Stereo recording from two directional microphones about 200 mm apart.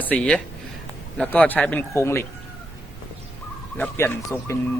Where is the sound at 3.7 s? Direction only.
10° left (ahead or behind).